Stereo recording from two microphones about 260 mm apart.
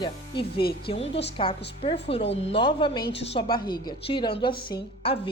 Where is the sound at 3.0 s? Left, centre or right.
Left.